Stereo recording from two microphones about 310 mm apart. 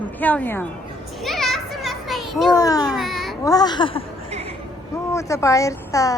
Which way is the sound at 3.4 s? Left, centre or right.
Centre.